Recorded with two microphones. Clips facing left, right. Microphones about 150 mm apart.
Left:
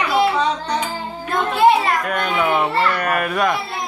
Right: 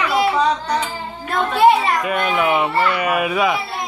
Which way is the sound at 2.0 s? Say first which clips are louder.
Right 1 dB; 5° right (ahead or behind).